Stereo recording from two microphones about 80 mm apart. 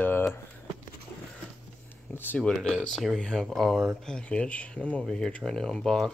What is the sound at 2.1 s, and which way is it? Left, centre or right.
Cutlery, left.